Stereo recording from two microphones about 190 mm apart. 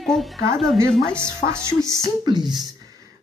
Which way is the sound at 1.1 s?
15° right (ahead or behind).